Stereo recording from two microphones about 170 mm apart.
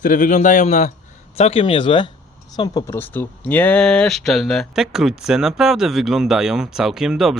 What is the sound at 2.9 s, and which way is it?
Speech, 10° left (ahead or behind).